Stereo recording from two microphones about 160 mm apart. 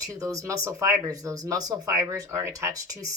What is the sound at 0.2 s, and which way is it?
Speech, 20° right (ahead or behind).